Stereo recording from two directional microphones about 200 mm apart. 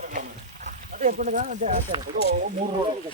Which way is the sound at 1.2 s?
40° right (ahead or behind).